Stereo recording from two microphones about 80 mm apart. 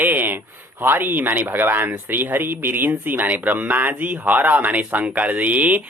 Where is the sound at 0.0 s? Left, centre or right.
Right.